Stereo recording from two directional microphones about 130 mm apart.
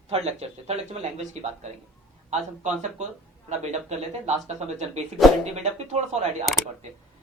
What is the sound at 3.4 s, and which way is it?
Speech, 60° right (ahead or behind).